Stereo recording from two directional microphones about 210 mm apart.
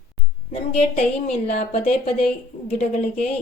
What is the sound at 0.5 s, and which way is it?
A woman's voice, 30° left (ahead or behind).